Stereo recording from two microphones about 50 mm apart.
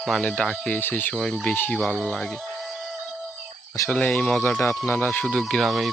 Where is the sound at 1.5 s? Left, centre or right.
Left.